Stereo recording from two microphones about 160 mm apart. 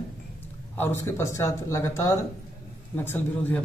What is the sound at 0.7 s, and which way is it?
Speech, 15° left (ahead or behind).